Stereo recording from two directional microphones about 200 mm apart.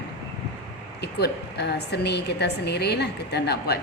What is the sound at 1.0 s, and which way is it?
A woman's voice, 55° left (ahead or behind).